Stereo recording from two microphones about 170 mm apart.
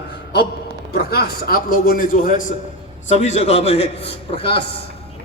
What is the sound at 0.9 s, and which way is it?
A man's voice, 65° left (ahead or behind).